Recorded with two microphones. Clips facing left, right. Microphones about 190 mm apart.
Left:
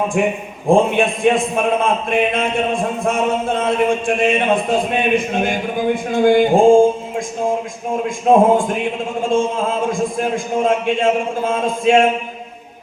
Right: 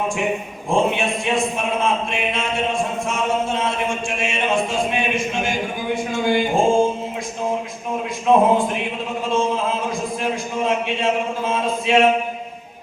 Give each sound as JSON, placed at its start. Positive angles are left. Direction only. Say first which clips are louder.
{"t": 0.2, "sound": "a man's voice", "louder": "left 5 dB", "side_deg": 50}
{"t": 3.1, "sound": "a sound", "louder": "left 6 dB", "side_deg": 55}
{"t": 8.3, "sound": "a man's voice", "louder": "left 3 dB", "side_deg": 50}
{"t": 9.9, "sound": "a man's voice", "louder": "left 4 dB", "side_deg": 50}